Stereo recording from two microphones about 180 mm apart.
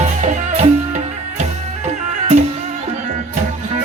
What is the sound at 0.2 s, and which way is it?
Music, 40° right (ahead or behind).